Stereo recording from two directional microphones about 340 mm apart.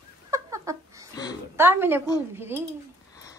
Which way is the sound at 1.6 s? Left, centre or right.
Centre.